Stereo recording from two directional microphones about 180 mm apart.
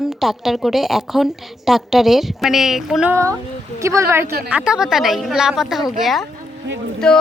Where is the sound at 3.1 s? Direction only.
15° right (ahead or behind).